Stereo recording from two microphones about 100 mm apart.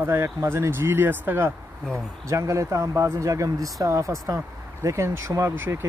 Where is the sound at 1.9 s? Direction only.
30° right (ahead or behind).